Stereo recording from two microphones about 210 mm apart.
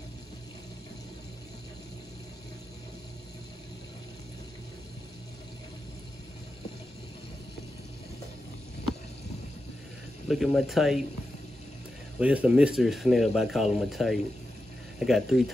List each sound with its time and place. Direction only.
10.2 s speech: centre (ahead or behind)
12.2 s speech: 5° right (ahead or behind)